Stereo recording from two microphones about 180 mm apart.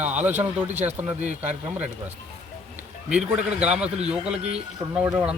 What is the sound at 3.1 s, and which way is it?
A man's voice, 5° right (ahead or behind).